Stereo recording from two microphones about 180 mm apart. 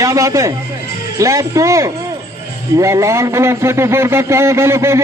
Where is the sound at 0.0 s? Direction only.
15° right (ahead or behind).